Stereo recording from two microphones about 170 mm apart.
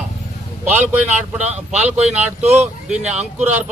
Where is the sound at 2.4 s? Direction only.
40° right (ahead or behind).